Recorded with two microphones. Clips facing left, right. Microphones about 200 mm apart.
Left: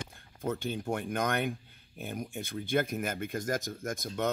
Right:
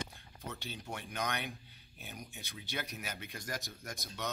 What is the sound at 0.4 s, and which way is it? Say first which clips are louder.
Speech: left 12 dB; 50° left (ahead or behind).